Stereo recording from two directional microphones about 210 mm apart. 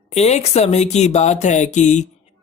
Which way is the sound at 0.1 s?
30° left (ahead or behind).